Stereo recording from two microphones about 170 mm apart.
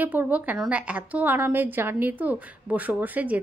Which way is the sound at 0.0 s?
10° right (ahead or behind).